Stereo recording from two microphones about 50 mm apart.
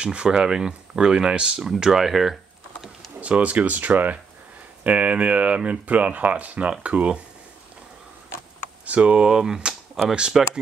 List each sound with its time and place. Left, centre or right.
0.0 s speech: right
1.6 s speech: centre
3.2 s speech: right
8.8 s speech: right
9.3 s speech: centre
10.0 s speech: centre